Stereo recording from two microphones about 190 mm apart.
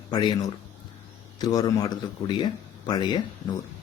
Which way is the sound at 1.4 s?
20° left (ahead or behind).